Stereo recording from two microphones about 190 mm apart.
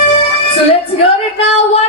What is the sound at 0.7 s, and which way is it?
Music, 30° left (ahead or behind).